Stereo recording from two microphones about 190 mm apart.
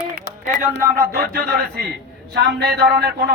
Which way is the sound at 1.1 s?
55° right (ahead or behind).